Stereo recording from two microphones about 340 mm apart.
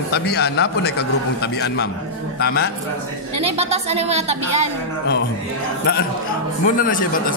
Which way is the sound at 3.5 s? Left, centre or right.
Centre.